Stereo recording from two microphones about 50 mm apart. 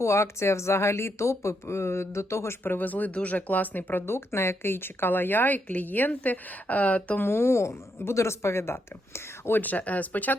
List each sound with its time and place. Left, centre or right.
0.0 s speech: left
2.6 s a woman's voice: left
4.0 s a woman's voice: left
7.3 s speech: left